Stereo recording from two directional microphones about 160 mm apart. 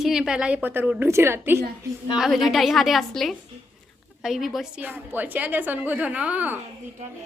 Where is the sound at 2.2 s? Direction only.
Centre (ahead or behind).